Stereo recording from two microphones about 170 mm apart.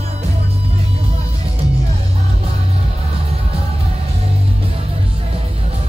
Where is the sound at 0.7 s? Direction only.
35° right (ahead or behind).